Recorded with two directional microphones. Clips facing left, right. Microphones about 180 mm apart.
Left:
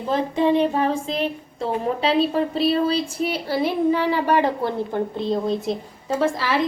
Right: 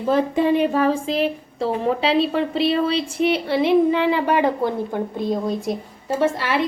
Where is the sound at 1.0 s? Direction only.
5° right (ahead or behind).